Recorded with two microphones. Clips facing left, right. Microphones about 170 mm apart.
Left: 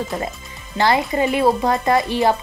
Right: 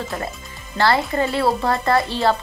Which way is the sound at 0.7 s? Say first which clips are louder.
Left 1 dB; 15° left (ahead or behind).